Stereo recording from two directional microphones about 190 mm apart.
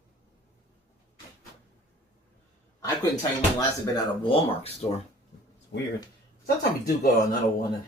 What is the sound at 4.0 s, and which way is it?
Speech, 25° left (ahead or behind).